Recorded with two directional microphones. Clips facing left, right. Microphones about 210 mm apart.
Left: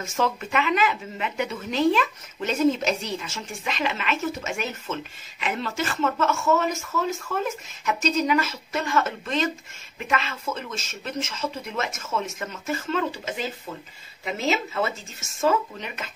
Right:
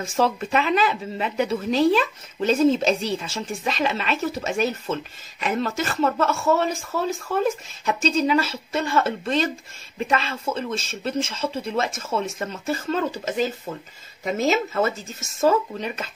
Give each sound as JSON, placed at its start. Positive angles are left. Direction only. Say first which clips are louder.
{"t": 0.0, "sound": "speech", "louder": "right 4 dB", "side_deg": -35}